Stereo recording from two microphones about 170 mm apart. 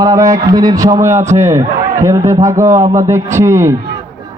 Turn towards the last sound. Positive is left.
turn(degrees=-15)  # may be behind; listen again after turning